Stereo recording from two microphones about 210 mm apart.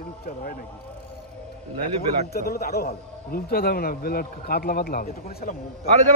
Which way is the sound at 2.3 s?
45° left (ahead or behind).